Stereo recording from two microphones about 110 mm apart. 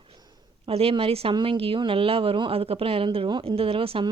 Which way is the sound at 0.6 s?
60° right (ahead or behind).